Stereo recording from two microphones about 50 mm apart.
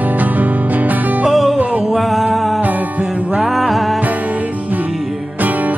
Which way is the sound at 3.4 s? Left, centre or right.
Centre.